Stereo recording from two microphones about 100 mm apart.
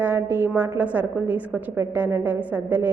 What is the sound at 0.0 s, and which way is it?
A woman's voice, 20° right (ahead or behind).